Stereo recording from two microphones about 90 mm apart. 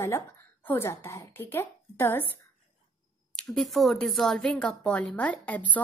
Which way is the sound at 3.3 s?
5° left (ahead or behind).